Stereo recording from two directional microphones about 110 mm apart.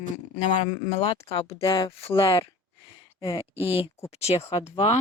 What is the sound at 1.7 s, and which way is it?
Speech, 50° left (ahead or behind).